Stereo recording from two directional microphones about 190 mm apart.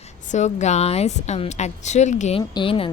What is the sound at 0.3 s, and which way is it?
A woman's voice, 40° left (ahead or behind).